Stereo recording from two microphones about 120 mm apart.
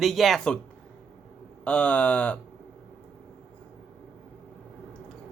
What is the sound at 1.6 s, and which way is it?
Speech, 10° left (ahead or behind).